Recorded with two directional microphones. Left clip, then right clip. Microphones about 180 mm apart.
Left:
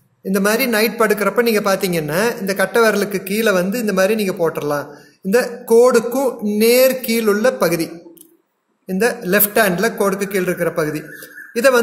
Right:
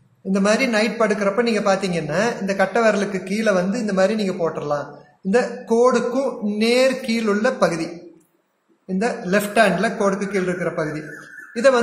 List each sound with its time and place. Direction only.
0.3 s speech: 55° left (ahead or behind)